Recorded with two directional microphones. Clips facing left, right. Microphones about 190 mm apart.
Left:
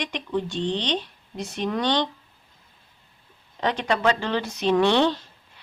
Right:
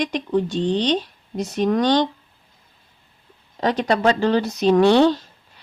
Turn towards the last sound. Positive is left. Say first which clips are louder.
# right 5 dB
turn(degrees=-40)  # may be behind; listen again after turning